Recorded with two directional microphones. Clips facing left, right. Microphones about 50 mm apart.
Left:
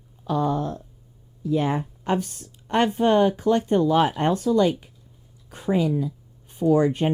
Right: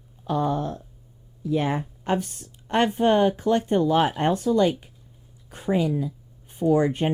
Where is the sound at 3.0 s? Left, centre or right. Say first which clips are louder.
Left 1 dB; centre.